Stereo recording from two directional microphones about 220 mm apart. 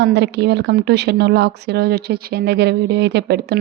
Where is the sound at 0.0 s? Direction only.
50° right (ahead or behind).